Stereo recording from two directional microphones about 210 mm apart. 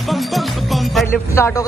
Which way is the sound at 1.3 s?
10° left (ahead or behind).